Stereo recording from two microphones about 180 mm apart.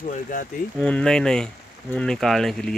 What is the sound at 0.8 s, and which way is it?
Speech, 5° left (ahead or behind).